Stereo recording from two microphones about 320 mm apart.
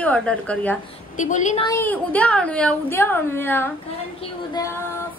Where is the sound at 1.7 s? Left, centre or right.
Centre.